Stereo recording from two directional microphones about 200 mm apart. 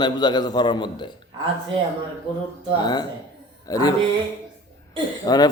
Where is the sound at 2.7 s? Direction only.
20° left (ahead or behind).